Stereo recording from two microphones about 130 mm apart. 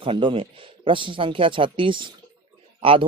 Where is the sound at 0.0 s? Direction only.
45° right (ahead or behind).